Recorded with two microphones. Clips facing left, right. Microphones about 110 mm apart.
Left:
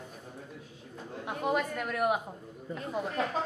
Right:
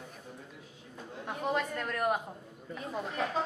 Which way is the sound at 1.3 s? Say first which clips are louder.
Left 2 dB; 5° left (ahead or behind).